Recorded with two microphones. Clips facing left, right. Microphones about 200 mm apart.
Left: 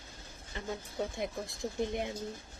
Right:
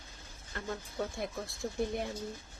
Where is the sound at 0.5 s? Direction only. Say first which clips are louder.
Even; 15° left (ahead or behind).